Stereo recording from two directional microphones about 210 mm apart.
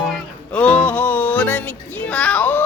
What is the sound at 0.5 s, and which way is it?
Music, 5° left (ahead or behind).